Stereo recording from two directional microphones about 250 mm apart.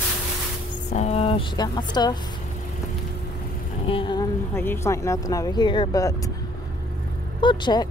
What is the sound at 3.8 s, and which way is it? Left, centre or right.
Speech, left.